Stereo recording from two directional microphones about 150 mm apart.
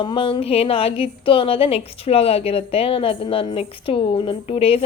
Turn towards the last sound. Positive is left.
turn(degrees=40)  # may be behind; listen again after turning